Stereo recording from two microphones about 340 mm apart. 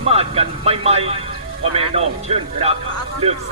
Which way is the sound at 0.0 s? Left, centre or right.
Centre.